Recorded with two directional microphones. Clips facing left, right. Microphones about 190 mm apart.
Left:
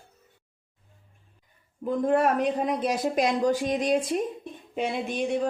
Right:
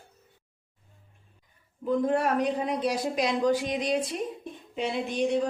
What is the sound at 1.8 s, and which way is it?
Speech, 50° left (ahead or behind).